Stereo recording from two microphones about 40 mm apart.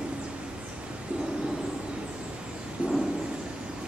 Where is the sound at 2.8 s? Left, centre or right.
Right.